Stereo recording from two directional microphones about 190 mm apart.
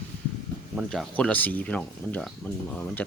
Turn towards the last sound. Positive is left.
turn(degrees=10)  # may be behind; listen again after turning